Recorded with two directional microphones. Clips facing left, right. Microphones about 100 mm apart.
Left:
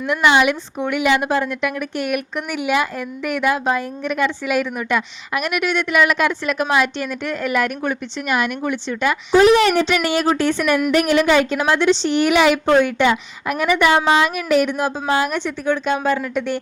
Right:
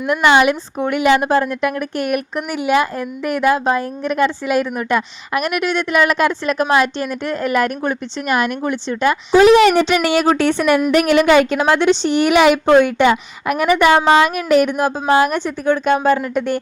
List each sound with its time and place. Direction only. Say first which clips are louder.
0.1 s a woman's voice: right 3 dB; 45° right (ahead or behind)
9.4 s a woman's voice: right 4 dB; 90° right; by 16.2 s 50° right (ahead or behind)